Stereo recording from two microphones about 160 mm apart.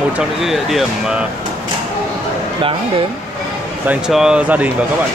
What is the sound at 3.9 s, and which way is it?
Speech, 5° right (ahead or behind).